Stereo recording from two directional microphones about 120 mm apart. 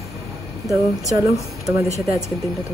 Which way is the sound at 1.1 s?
30° right (ahead or behind).